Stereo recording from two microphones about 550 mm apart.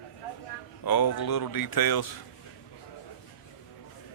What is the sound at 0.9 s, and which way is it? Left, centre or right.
Speech, left.